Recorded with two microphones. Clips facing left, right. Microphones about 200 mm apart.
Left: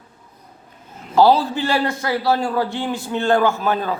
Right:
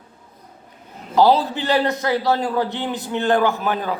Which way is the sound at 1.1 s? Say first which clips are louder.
Left 1 dB; 20° right (ahead or behind).